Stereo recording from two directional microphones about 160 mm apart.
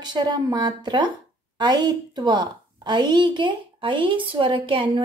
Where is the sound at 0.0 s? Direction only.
25° right (ahead or behind).